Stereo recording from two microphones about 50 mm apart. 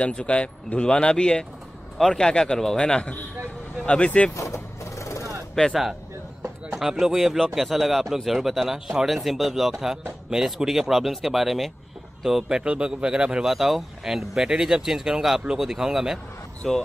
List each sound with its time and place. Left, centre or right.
0.0 s a man's voice: left
4.3 s vehicle: left
5.7 s speech: centre
13.5 s speech: centre